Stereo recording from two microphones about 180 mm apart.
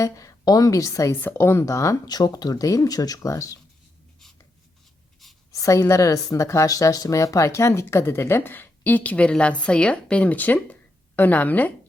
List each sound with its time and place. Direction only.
0.0 s speech: 20° left (ahead or behind)
5.5 s speech: 15° left (ahead or behind)